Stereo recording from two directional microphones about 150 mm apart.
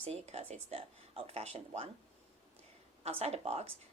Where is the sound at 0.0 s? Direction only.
45° right (ahead or behind).